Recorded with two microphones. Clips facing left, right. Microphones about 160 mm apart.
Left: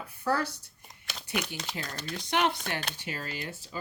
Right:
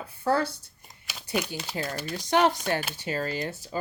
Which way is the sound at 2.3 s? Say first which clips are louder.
Right 6 dB; 40° right (ahead or behind).